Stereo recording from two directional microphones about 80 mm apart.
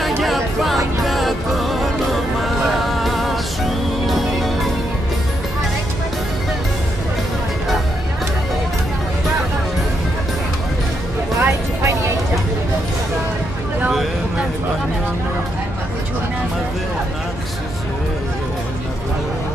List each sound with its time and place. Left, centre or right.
0.0 s music: centre
11.4 s music: right